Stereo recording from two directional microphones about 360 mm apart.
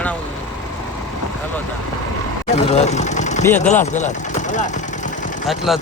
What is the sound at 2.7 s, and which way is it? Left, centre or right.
Speech, centre.